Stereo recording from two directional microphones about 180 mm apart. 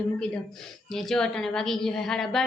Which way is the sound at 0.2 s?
5° left (ahead or behind).